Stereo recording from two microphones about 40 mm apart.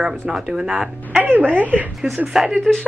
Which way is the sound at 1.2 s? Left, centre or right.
Right.